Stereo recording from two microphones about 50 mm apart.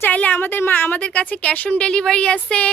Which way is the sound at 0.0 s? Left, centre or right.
Left.